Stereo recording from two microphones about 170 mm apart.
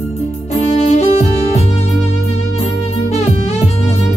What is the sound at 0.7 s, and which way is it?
Music, 40° left (ahead or behind).